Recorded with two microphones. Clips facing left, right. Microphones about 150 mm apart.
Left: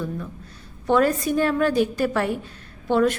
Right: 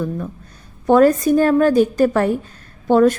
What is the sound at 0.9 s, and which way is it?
A woman's voice, 45° right (ahead or behind).